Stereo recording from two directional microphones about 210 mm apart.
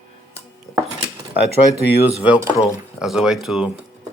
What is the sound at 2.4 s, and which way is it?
Speech, 15° left (ahead or behind).